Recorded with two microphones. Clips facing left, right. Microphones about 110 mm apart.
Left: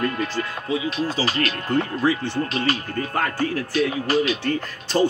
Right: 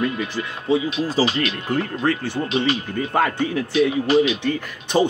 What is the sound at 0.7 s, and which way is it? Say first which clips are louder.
Speech: right 7 dB; 30° right (ahead or behind).